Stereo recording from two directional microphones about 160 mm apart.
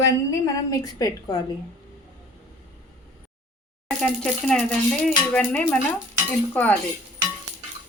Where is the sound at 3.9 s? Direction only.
5° left (ahead or behind).